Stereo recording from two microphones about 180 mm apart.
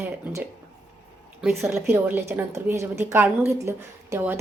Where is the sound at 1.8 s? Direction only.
15° right (ahead or behind).